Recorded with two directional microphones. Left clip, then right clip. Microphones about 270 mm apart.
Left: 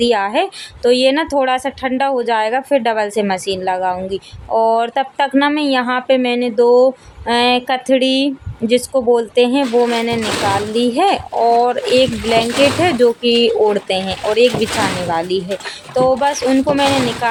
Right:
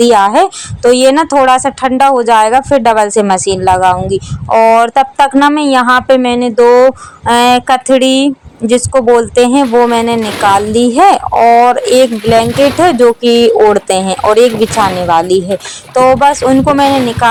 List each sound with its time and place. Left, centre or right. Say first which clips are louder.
0.0 s a woman's voice: right 9 dB; centre